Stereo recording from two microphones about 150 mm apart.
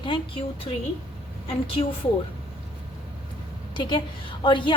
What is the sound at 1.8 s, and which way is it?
Speech, 40° left (ahead or behind).